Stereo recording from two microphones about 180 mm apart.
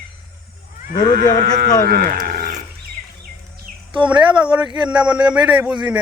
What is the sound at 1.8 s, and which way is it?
Speech, 50° right (ahead or behind).